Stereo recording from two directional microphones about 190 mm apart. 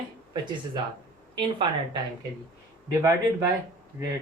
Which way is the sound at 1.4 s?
25° right (ahead or behind).